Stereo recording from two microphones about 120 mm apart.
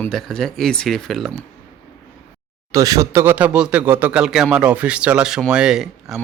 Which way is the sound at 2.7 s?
30° right (ahead or behind).